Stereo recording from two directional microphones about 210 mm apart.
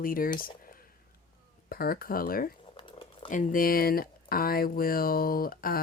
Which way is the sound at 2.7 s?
25° left (ahead or behind).